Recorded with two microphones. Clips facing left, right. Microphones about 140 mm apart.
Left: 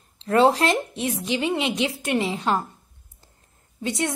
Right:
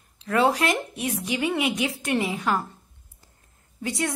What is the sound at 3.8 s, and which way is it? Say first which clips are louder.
Speech: left 2 dB; 25° left (ahead or behind).